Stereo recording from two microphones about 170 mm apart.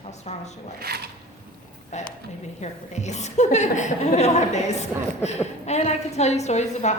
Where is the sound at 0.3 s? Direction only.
40° left (ahead or behind).